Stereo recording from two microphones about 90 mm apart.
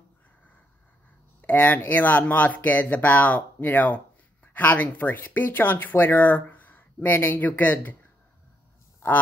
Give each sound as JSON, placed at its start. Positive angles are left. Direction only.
{"t": 1.4, "sound": "speech", "side_deg": 20}